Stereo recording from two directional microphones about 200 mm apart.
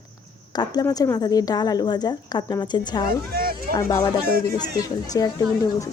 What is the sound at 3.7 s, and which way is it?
Speech, 15° left (ahead or behind).